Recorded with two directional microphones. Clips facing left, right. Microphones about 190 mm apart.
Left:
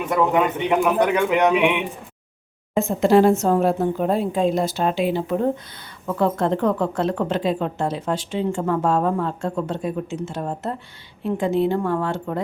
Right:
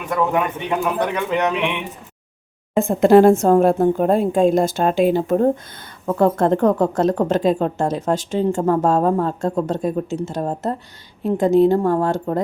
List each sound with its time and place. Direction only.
0.9 s a man's voice: 10° left (ahead or behind)
2.7 s a woman's voice: 55° right (ahead or behind)